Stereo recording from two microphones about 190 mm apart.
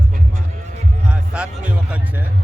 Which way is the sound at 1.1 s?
5° right (ahead or behind).